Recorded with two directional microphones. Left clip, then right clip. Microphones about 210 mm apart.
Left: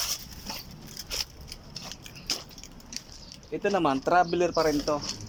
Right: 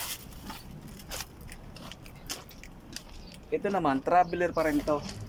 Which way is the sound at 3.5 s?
5° left (ahead or behind).